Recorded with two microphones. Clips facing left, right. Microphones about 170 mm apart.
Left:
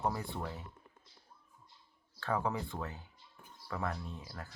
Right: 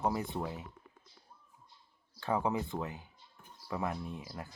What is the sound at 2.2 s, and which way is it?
Speech, 15° right (ahead or behind).